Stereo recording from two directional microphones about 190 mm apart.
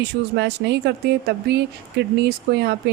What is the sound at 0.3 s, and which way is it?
Speech, 60° right (ahead or behind).